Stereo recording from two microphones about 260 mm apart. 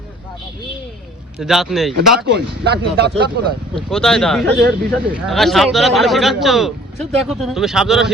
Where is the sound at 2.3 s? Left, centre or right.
Right.